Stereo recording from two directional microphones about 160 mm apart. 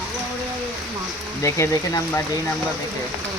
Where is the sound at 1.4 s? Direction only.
20° left (ahead or behind).